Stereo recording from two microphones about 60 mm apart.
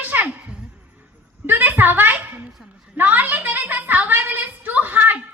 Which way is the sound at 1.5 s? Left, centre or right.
Right.